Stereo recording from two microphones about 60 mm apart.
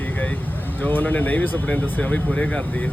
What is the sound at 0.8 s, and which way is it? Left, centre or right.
Speech, left.